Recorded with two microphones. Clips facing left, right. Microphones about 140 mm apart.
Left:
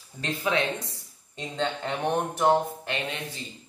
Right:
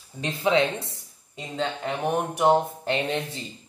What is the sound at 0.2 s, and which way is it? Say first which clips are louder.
Speech: right 5 dB; 25° right (ahead or behind).